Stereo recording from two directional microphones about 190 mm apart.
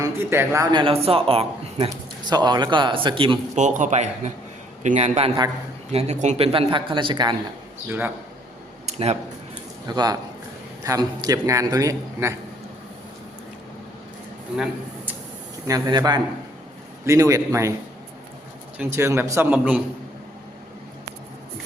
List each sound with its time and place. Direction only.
0.0 s a man's voice: 15° right (ahead or behind)
3.6 s a man's voice: 40° right (ahead or behind); by 7.3 s 25° right (ahead or behind)
7.9 s a man's voice: 10° right (ahead or behind)
8.9 s a sound: 35° right (ahead or behind)
9.8 s a man's voice: 20° right (ahead or behind)
14.5 s speech: centre (ahead or behind)
15.6 s a man's voice: 20° right (ahead or behind)
18.8 s a man's voice: 15° right (ahead or behind)